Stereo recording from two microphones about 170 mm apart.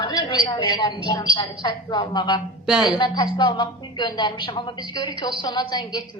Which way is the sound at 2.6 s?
Centre (ahead or behind).